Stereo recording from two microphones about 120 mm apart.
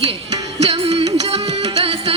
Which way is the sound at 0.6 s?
60° right (ahead or behind).